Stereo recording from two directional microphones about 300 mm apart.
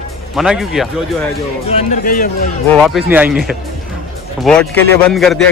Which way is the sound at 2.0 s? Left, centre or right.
Left.